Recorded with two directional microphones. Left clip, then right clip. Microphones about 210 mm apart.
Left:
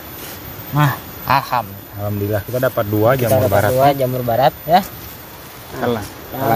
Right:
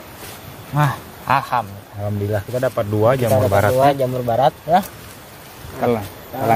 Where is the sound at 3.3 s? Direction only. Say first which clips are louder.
Left 1 dB; 20° right (ahead or behind).